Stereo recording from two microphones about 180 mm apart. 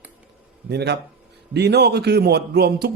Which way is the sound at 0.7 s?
65° right (ahead or behind).